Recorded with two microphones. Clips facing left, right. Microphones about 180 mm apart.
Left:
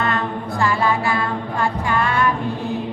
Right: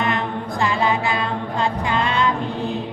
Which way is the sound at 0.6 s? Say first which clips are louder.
Left 1 dB; 20° right (ahead or behind).